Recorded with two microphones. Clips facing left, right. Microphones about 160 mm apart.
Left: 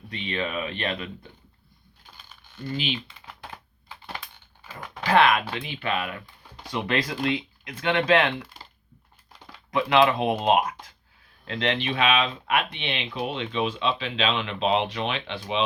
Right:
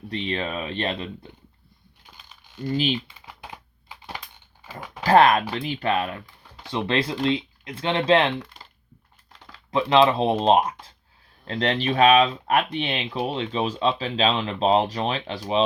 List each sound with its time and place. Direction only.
0.1 s speech: 35° right (ahead or behind)
2.6 s speech: 40° right (ahead or behind)
3.1 s typing: 10° right (ahead or behind)
5.0 s speech: 40° right (ahead or behind)
9.7 s speech: 30° right (ahead or behind)